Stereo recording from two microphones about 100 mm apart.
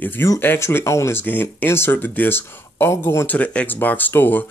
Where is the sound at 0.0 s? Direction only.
20° left (ahead or behind).